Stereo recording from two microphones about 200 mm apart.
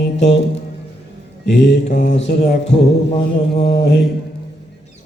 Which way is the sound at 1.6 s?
55° left (ahead or behind).